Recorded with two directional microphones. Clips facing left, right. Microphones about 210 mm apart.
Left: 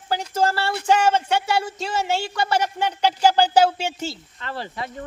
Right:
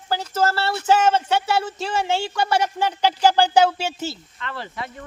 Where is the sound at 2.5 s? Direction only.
10° right (ahead or behind).